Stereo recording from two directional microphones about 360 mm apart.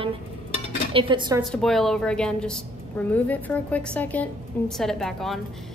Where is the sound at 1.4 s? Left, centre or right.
Centre.